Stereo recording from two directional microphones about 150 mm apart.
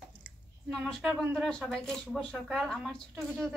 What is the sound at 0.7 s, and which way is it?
Speech, 5° left (ahead or behind).